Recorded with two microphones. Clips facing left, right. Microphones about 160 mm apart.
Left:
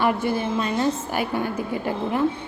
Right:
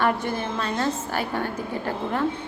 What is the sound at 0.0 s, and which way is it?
A woman's voice, 10° left (ahead or behind).